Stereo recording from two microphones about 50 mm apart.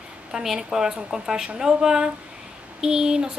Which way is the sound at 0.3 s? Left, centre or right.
Centre.